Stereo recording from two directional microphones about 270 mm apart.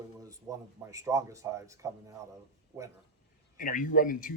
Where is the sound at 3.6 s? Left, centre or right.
Left.